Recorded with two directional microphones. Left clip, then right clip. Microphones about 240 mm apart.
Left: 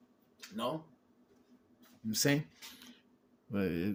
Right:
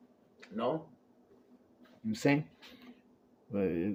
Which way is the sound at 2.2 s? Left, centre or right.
Left.